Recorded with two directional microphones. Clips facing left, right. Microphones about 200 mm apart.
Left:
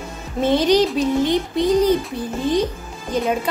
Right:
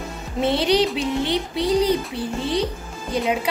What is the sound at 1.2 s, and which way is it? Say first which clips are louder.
Music: left 4 dB; 50° left (ahead or behind).